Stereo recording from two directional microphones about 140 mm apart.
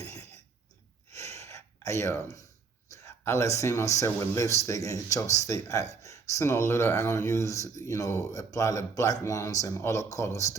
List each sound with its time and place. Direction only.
1.1 s gasp: 20° left (ahead or behind)
2.9 s speech: 20° left (ahead or behind)